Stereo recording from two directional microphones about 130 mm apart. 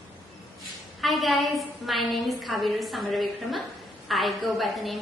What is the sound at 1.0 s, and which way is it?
A woman's voice, centre (ahead or behind).